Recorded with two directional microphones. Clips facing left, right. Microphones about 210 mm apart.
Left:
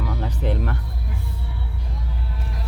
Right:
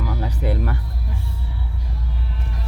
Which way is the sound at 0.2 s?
10° right (ahead or behind).